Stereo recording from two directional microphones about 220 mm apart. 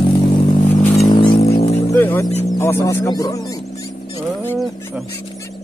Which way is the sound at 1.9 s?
10° left (ahead or behind).